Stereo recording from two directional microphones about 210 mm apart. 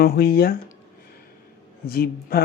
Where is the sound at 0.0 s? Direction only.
45° left (ahead or behind).